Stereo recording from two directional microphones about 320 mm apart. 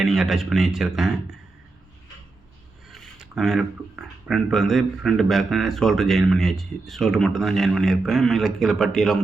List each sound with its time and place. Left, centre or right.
0.0 s speech: centre
2.9 s speech: centre